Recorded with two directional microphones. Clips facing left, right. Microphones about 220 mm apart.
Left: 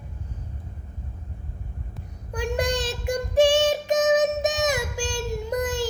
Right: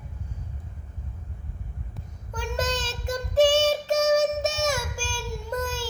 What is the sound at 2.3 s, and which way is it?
Child singing, 15° left (ahead or behind).